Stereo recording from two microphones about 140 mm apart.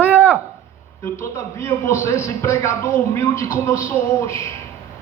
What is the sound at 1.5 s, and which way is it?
A man's voice, 20° left (ahead or behind).